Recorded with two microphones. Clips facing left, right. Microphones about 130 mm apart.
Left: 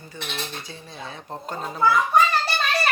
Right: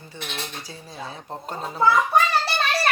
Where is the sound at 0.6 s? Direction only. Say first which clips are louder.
Even; 35° right (ahead or behind).